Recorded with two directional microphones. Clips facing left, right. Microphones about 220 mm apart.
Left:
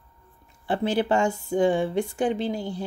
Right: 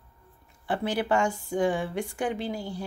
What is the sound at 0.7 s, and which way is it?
Speech, 25° left (ahead or behind).